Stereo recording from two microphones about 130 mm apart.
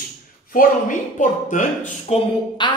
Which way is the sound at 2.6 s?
35° left (ahead or behind).